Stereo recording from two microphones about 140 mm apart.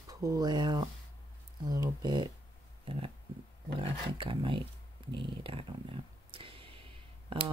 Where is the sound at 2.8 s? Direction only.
40° right (ahead or behind).